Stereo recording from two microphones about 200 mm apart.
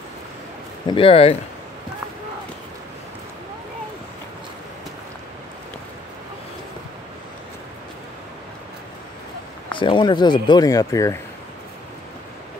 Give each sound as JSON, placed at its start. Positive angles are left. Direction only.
{"t": 0.8, "sound": "speech", "side_deg": 25}
{"t": 9.7, "sound": "speech", "side_deg": 25}